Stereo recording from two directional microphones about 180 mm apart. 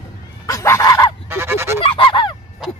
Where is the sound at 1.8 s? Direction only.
30° left (ahead or behind).